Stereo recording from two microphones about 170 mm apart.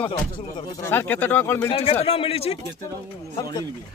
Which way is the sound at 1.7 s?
35° left (ahead or behind).